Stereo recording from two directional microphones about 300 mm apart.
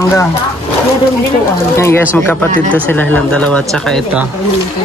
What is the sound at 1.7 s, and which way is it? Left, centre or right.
Speech, centre.